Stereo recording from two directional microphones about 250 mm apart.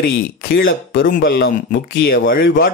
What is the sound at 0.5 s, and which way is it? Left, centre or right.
A man's voice, left.